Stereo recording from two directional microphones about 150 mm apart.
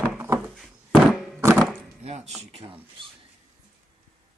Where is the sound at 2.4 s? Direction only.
40° right (ahead or behind).